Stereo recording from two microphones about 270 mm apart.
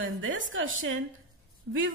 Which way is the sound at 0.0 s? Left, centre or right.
Right.